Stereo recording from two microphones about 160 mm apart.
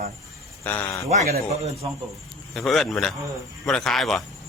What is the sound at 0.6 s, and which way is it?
Speech, 10° left (ahead or behind).